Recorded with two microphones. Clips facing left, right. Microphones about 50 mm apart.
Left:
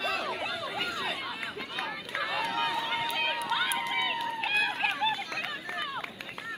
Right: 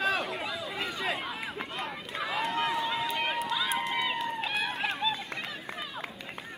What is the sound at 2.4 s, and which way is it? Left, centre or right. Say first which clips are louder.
Run: right 3 dB; right.